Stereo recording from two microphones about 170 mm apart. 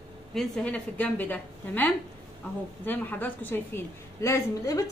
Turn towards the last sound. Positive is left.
turn(degrees=20)  # may be behind; listen again after turning